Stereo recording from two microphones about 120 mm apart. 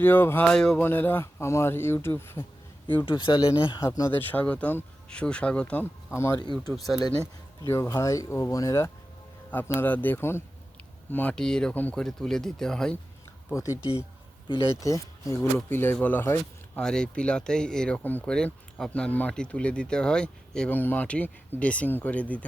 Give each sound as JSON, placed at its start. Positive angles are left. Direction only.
{"t": 0.0, "sound": "speech", "side_deg": 20}
{"t": 0.4, "sound": "speech", "side_deg": 5}
{"t": 0.9, "sound": "speech", "side_deg": 15}
{"t": 3.1, "sound": "speech", "side_deg": 40}
{"t": 3.8, "sound": "speech", "side_deg": 25}
{"t": 4.3, "sound": "speech", "side_deg": 10}
{"t": 7.7, "sound": "speech", "side_deg": 25}
{"t": 13.5, "sound": "speech", "side_deg": 25}
{"t": 14.8, "sound": "speech", "side_deg": 25}
{"t": 16.8, "sound": "speech", "side_deg": 5}